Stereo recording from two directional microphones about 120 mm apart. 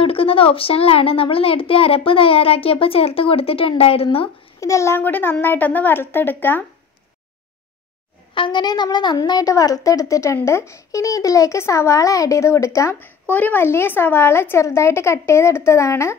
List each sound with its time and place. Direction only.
0.0 s a woman's voice: 50° left (ahead or behind)
4.6 s a woman's voice: 25° left (ahead or behind)
8.4 s a woman's voice: 40° left (ahead or behind)
13.3 s a woman's voice: 15° left (ahead or behind)